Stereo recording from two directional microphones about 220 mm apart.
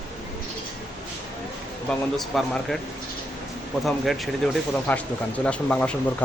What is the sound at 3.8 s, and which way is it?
Speech, centre (ahead or behind).